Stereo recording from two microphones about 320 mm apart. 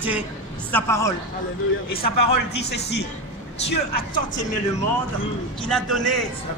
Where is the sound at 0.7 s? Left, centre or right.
Centre.